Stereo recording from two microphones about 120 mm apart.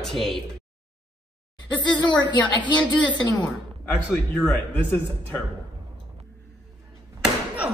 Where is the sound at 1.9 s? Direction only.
40° left (ahead or behind).